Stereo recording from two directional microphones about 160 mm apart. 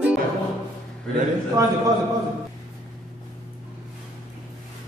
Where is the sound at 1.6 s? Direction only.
20° right (ahead or behind).